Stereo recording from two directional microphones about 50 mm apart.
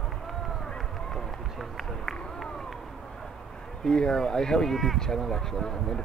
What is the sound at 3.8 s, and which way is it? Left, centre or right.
Speech, centre.